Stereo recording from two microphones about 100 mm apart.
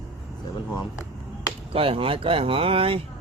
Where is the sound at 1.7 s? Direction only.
65° right (ahead or behind).